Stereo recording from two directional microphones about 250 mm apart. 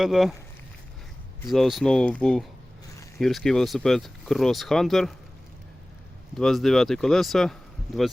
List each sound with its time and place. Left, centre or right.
0.0 s speech: centre
1.4 s speech: centre
6.3 s speech: centre